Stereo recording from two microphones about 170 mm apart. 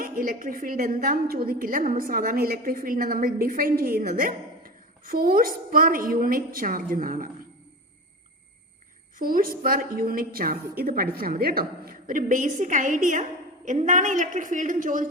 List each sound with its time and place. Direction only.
0.0 s a woman's voice: 55° right (ahead or behind)
9.1 s a woman's voice: 55° right (ahead or behind)